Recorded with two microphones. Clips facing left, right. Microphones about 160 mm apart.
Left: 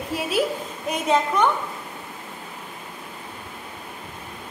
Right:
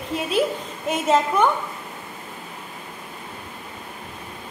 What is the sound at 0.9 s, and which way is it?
Speech, centre (ahead or behind).